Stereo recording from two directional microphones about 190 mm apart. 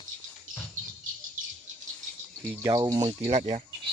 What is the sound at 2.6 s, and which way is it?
Speech, 20° right (ahead or behind).